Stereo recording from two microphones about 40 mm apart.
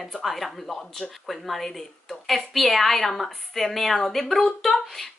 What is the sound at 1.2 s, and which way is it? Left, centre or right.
A woman's voice, centre.